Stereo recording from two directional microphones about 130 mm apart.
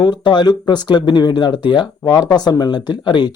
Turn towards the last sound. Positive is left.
turn(degrees=35)  # may be behind; listen again after turning